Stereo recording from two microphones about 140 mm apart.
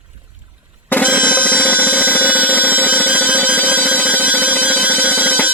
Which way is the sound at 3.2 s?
10° left (ahead or behind).